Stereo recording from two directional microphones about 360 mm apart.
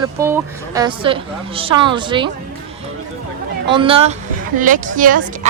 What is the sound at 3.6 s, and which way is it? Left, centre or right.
A woman's voice, centre.